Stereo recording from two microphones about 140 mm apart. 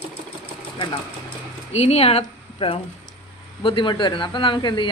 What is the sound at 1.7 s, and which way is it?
A woman's voice, 45° left (ahead or behind).